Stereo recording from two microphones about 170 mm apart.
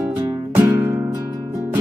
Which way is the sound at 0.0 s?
10° right (ahead or behind).